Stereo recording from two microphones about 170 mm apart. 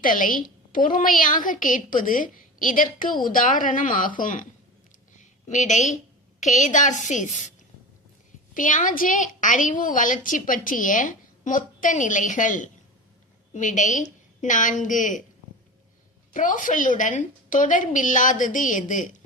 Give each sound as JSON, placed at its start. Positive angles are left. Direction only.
{"t": 0.0, "sound": "a woman's voice", "side_deg": 55}
{"t": 5.5, "sound": "a woman's voice", "side_deg": 45}
{"t": 8.5, "sound": "a woman's voice", "side_deg": 50}
{"t": 16.3, "sound": "a woman's voice", "side_deg": 50}